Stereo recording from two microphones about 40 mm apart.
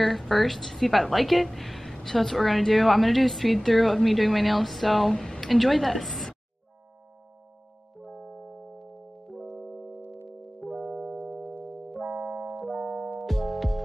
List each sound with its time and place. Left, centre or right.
0.0 s a woman's voice: centre
5.1 s speech: centre
5.4 s a woman's voice: centre
8.1 s music: right
8.7 s music: centre
11.6 s keyboard: centre
12.2 s music: centre